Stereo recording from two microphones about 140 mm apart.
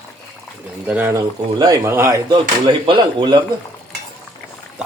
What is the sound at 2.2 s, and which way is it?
Speech, 35° right (ahead or behind).